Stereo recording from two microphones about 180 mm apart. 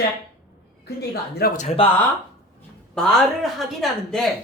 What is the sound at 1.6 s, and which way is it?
Speech, 35° left (ahead or behind).